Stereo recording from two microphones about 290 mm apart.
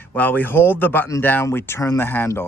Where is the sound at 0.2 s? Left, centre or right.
Centre.